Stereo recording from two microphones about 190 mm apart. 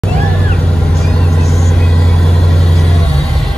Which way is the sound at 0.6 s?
5° left (ahead or behind).